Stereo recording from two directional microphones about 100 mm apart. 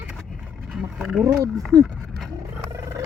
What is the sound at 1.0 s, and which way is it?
Speech, 5° right (ahead or behind).